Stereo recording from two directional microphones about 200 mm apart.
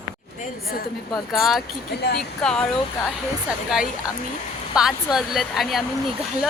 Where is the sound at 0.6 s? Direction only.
45° left (ahead or behind).